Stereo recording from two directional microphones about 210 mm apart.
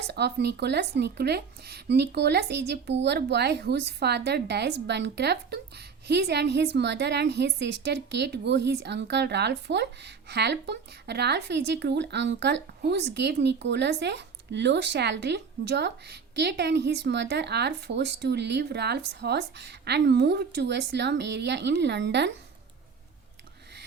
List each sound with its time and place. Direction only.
0.1 s speech: 50° right (ahead or behind)